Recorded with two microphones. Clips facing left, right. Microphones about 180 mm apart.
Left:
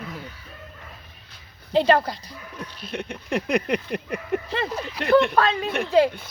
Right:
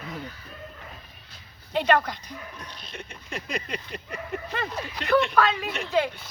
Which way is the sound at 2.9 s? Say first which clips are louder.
Left 12 dB; 60° left (ahead or behind).